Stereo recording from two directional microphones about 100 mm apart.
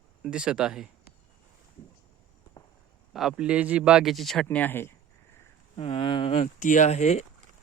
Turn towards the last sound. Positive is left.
turn(degrees=90)